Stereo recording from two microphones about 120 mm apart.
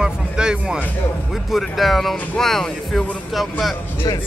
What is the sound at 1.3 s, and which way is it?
Speech, centre (ahead or behind).